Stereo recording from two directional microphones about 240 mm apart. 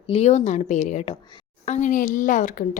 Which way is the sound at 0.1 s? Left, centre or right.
Left.